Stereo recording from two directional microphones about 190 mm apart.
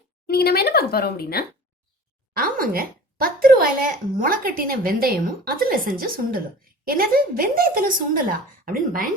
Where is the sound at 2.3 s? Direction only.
50° right (ahead or behind).